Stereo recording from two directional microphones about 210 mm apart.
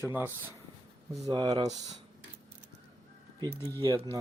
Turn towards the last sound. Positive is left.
turn(degrees=-15)  # may be behind; listen again after turning